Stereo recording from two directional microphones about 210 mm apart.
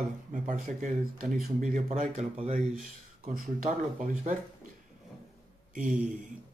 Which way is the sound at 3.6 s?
35° right (ahead or behind).